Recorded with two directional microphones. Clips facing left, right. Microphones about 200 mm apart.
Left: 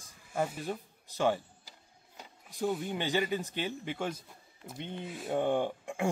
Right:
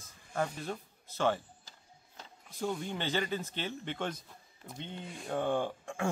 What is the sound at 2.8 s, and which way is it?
Speech, 15° left (ahead or behind).